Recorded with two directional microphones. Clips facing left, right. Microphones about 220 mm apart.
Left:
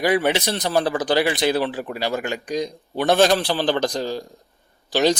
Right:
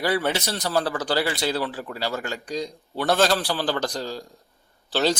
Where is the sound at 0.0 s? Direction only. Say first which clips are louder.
Left 4 dB; 20° left (ahead or behind).